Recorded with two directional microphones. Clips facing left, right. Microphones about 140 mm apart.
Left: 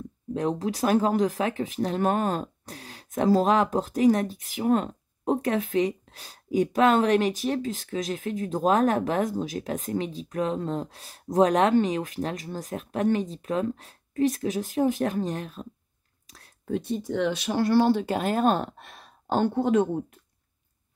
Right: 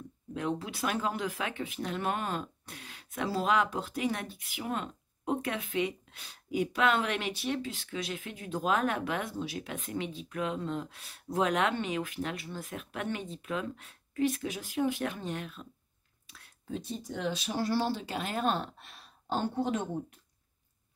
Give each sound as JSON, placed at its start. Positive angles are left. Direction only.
{"t": 0.3, "sound": "speech", "side_deg": 40}
{"t": 16.3, "sound": "a sound", "side_deg": 40}
{"t": 16.6, "sound": "speech", "side_deg": 60}